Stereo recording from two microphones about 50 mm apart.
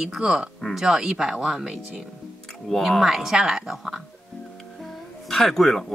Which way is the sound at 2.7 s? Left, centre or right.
Centre.